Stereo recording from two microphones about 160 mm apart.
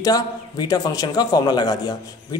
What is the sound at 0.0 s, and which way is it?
A man's voice, 25° left (ahead or behind).